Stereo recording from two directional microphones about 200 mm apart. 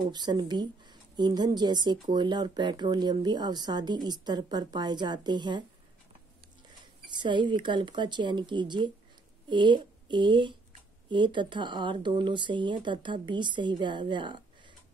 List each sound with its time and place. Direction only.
0.1 s speech: 20° right (ahead or behind)
7.1 s speech: 25° right (ahead or behind)